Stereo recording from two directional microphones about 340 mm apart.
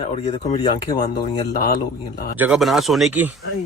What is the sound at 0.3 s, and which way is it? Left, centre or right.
Speech, centre.